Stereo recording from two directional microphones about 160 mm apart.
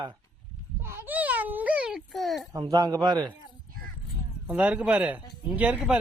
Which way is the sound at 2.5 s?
25° right (ahead or behind).